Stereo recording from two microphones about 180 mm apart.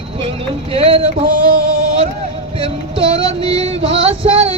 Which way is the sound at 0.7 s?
35° right (ahead or behind).